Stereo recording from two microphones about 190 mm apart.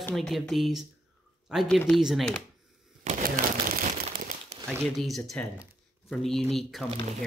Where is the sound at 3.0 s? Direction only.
45° right (ahead or behind).